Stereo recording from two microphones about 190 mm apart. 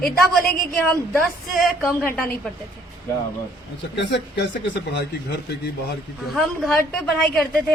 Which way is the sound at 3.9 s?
65° left (ahead or behind).